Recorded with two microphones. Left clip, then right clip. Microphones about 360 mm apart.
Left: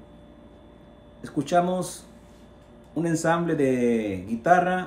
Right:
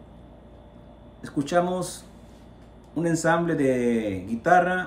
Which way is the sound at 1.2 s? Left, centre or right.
Centre.